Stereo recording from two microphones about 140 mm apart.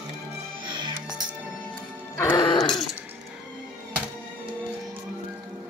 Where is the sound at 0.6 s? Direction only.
30° right (ahead or behind).